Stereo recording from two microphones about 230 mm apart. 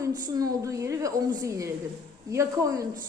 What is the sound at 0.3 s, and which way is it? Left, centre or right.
A woman's voice, centre.